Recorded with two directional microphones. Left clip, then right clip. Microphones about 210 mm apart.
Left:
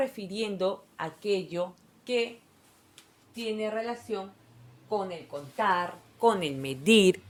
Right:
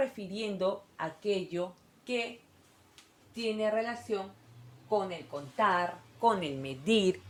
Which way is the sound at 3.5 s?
25° left (ahead or behind).